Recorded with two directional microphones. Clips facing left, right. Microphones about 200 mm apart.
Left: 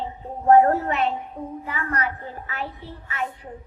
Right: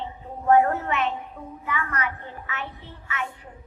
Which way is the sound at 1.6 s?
35° left (ahead or behind).